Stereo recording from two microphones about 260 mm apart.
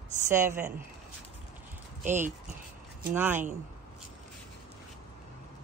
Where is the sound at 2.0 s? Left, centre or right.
Right.